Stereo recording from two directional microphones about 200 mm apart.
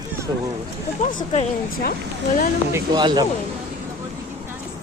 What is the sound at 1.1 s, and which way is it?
Speech, 30° left (ahead or behind).